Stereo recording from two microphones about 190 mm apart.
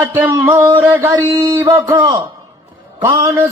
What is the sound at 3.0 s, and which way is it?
Music, 15° right (ahead or behind).